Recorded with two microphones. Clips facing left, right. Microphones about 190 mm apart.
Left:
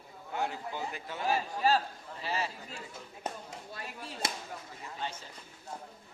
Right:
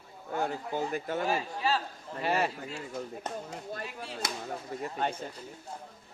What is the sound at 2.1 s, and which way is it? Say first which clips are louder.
Speech: right 7 dB; 60° right (ahead or behind).